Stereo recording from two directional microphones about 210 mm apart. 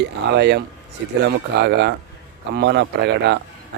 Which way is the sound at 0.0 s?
55° right (ahead or behind).